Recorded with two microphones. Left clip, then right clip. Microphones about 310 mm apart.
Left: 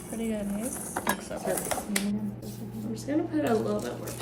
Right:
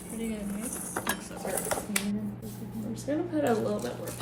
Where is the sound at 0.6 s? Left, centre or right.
Centre.